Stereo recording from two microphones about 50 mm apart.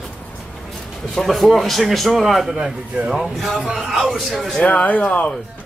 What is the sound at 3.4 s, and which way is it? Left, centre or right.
A man's voice, centre.